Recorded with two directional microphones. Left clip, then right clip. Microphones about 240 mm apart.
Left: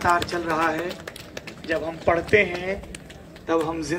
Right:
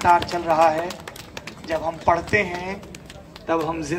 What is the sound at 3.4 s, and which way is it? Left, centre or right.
Speech, centre.